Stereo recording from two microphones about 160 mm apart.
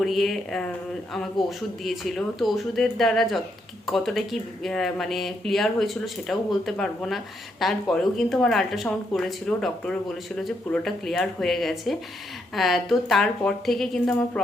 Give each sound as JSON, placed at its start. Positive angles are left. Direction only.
{"t": 0.0, "sound": "speech", "side_deg": 0}